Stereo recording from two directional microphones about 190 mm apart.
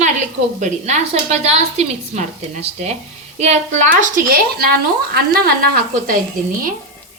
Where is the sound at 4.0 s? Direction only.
50° right (ahead or behind).